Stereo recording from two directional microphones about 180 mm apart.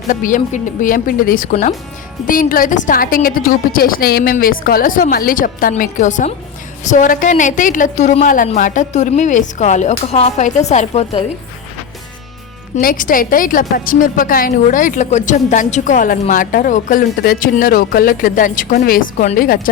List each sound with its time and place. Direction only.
0.1 s a woman's voice: 45° left (ahead or behind)
12.7 s a woman's voice: 50° left (ahead or behind)